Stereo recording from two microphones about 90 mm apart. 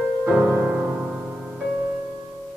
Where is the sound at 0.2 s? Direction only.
15° right (ahead or behind).